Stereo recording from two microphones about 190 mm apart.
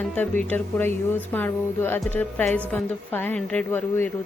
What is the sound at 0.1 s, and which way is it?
A woman's voice, 10° left (ahead or behind).